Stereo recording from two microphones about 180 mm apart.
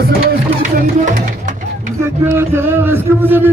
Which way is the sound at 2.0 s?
15° right (ahead or behind).